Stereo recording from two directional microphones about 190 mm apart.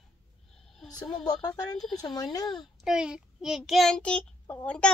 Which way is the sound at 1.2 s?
20° left (ahead or behind).